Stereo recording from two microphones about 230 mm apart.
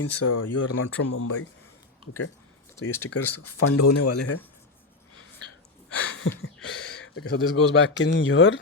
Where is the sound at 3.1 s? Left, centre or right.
Left.